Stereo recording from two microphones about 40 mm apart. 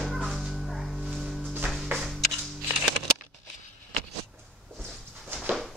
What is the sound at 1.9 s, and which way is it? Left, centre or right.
Music, right.